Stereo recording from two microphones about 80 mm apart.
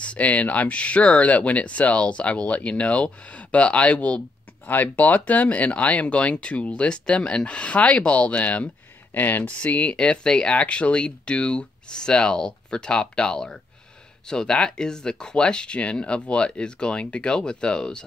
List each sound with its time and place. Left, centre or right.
0.0 s speech: centre